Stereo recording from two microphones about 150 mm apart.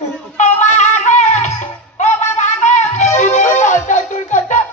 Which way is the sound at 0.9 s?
50° left (ahead or behind).